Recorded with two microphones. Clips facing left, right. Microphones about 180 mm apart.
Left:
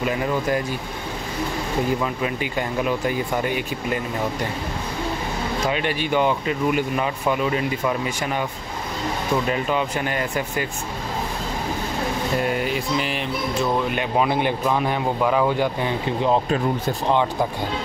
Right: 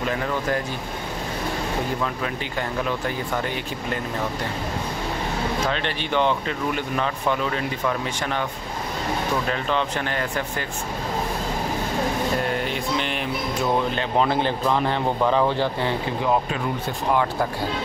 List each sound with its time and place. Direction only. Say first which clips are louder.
0.1 s speech: left 2 dB; 10° left (ahead or behind)
2.8 s speech: left 5 dB; 10° left (ahead or behind)
5.7 s speech: left 3 dB; 10° left (ahead or behind)
9.5 s speech: left 2 dB; 10° left (ahead or behind)
12.6 s mantra: left 2 dB; 5° left (ahead or behind)
13.9 s speech: left 1 dB; 10° left (ahead or behind)
17.1 s speech: left 1 dB; 15° left (ahead or behind)